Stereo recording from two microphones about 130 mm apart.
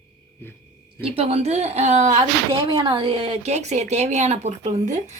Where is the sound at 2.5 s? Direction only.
35° right (ahead or behind); by 4.9 s 60° right (ahead or behind).